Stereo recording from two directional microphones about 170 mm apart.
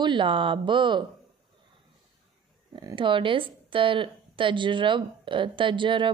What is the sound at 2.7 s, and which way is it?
Speech, 25° right (ahead or behind).